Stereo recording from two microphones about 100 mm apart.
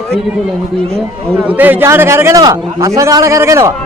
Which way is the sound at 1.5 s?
20° right (ahead or behind).